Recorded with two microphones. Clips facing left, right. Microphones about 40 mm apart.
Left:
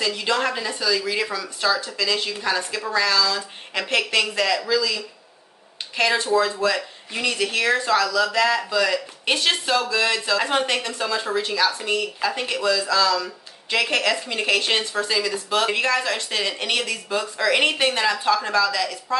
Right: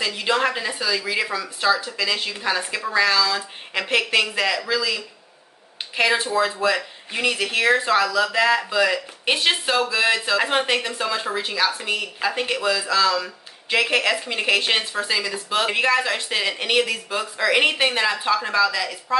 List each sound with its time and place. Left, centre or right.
0.0 s speech: centre